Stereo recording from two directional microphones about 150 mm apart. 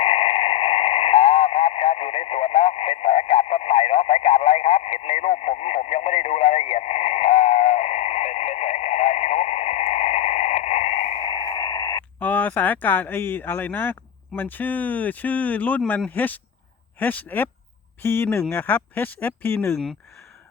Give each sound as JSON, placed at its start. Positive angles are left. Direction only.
{"t": 0.0, "sound": "radio", "side_deg": 40}
{"t": 12.2, "sound": "speech", "side_deg": 10}
{"t": 19.7, "sound": "speech", "side_deg": 5}